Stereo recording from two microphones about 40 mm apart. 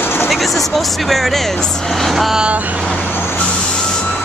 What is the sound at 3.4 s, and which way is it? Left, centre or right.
Vehicle, left.